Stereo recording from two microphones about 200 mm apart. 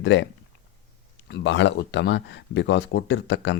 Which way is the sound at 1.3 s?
65° left (ahead or behind).